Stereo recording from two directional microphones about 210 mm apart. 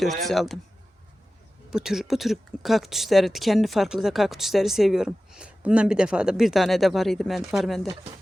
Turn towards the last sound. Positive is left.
turn(degrees=0)  # may be behind; listen again after turning